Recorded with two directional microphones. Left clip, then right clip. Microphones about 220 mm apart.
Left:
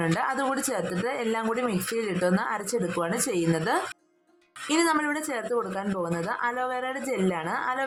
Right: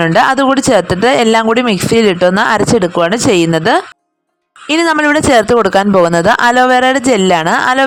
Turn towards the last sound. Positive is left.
turn(degrees=-45)  # may be behind; listen again after turning